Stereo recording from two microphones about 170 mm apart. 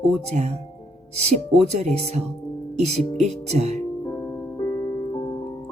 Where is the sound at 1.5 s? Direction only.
40° right (ahead or behind).